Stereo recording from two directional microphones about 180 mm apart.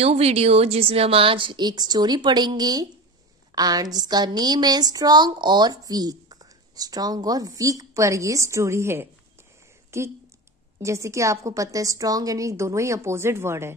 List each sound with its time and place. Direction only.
0.0 s a woman's voice: 35° right (ahead or behind); by 9.0 s 15° right (ahead or behind)
9.8 s a sound: 15° right (ahead or behind)
10.8 s a woman's voice: 15° right (ahead or behind)